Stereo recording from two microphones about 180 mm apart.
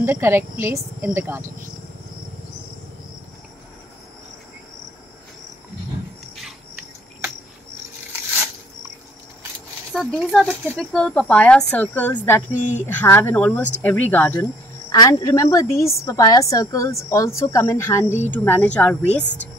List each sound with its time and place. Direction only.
0.0 s a woman's voice: 15° right (ahead or behind)
9.9 s a woman's voice: centre (ahead or behind)